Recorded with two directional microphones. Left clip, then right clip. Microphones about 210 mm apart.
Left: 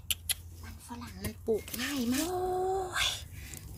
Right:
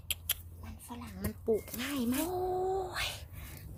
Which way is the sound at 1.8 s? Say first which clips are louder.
Left 2 dB; centre (ahead or behind).